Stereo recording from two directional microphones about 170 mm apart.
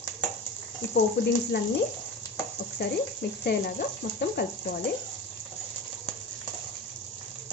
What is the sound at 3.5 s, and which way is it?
Speech, 80° left.